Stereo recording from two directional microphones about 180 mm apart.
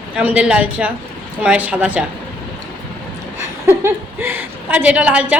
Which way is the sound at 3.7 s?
10° right (ahead or behind).